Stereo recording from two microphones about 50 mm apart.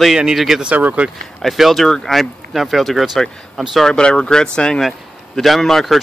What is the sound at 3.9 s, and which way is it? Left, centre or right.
Speech, centre.